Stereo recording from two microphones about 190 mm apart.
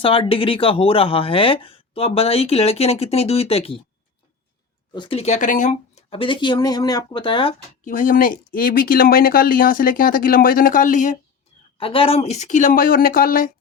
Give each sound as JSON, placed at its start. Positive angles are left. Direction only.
{"t": 0.0, "sound": "speech", "side_deg": 30}
{"t": 4.9, "sound": "speech", "side_deg": 30}
{"t": 7.9, "sound": "speech", "side_deg": 45}
{"t": 11.8, "sound": "speech", "side_deg": 30}